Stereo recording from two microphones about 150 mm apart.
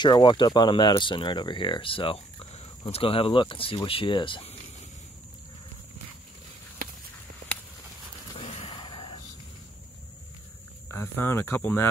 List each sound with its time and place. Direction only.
0.0 s speech: 30° left (ahead or behind)
8.4 s a sound: 40° left (ahead or behind)
10.9 s speech: 15° left (ahead or behind)